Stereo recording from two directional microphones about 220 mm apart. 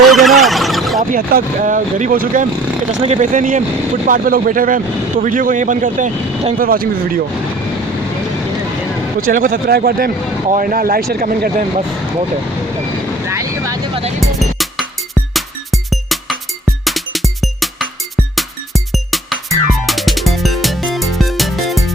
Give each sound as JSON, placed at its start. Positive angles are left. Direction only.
{"t": 0.1, "sound": "a sound", "side_deg": 0}
{"t": 1.1, "sound": "speech", "side_deg": -35}
{"t": 9.2, "sound": "speech", "side_deg": -40}
{"t": 13.2, "sound": "vehicle", "side_deg": -15}
{"t": 14.2, "sound": "music", "side_deg": 0}